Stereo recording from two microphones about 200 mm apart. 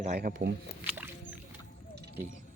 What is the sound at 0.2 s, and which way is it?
Speech, 50° right (ahead or behind).